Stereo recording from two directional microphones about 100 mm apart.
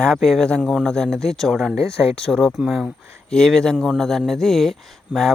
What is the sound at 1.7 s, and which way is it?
Speech, 30° right (ahead or behind).